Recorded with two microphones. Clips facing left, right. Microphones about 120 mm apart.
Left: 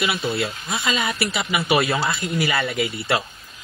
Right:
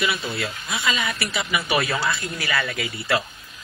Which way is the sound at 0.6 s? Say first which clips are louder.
Right 1 dB; 40° left (ahead or behind).